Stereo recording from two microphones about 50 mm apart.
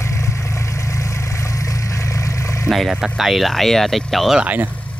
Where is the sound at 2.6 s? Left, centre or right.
Centre.